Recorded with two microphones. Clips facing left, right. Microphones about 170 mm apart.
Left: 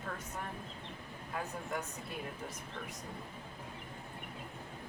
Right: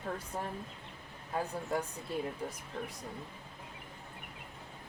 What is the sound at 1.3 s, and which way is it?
Speech, 30° right (ahead or behind).